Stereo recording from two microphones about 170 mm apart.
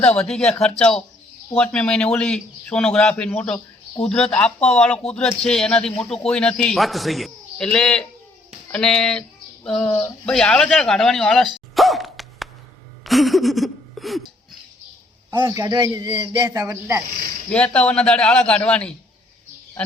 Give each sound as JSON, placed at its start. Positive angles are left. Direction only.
{"t": 0.2, "sound": "speech", "side_deg": 5}
{"t": 11.7, "sound": "dog", "side_deg": 0}
{"t": 13.1, "sound": "a sound", "side_deg": 0}
{"t": 15.3, "sound": "a man's voice", "side_deg": -20}
{"t": 17.7, "sound": "a man's voice", "side_deg": 5}